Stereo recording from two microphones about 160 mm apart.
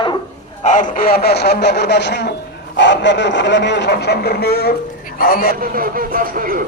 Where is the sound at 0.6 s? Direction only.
55° left (ahead or behind).